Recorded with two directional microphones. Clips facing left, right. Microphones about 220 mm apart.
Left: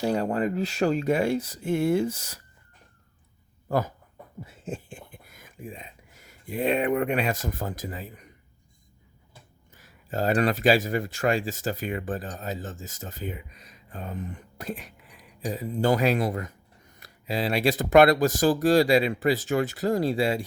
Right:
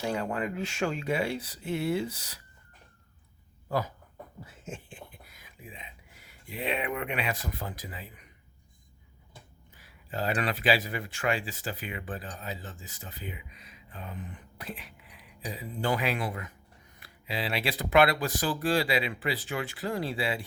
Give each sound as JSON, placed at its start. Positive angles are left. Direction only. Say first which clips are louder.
{"t": 0.0, "sound": "speech", "louder": "left 6 dB", "side_deg": 40}
{"t": 3.7, "sound": "speech", "louder": "left 5 dB", "side_deg": 50}
{"t": 4.4, "sound": "speech", "louder": "left 8 dB", "side_deg": 35}
{"t": 9.7, "sound": "speech", "louder": "left 5 dB", "side_deg": 45}